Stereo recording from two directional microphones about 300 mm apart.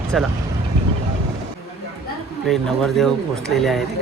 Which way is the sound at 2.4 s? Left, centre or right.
Centre.